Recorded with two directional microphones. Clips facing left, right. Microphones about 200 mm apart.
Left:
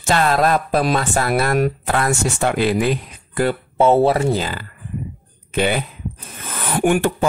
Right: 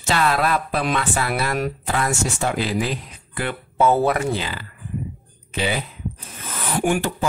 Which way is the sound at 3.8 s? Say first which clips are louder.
Left 4 dB; 25° left (ahead or behind).